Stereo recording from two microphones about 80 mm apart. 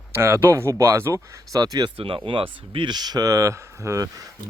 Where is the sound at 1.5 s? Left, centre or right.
Right.